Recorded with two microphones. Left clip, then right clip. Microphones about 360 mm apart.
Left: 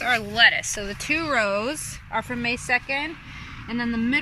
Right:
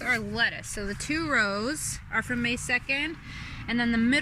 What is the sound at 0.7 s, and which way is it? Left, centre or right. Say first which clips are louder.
Speech: left 4 dB; left.